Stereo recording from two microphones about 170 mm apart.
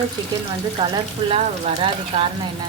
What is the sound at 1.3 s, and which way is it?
Speech, 35° right (ahead or behind).